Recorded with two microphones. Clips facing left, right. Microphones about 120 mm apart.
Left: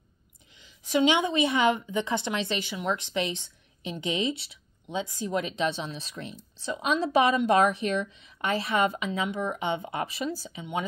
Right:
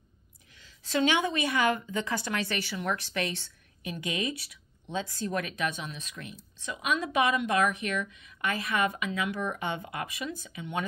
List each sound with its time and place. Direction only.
0.5 s speech: 15° left (ahead or behind)
4.8 s speech: 15° left (ahead or behind); by 10.6 s 35° left (ahead or behind)
10.6 s speech: 20° left (ahead or behind)